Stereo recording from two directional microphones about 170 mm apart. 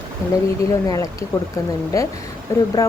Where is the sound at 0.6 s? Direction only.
20° left (ahead or behind).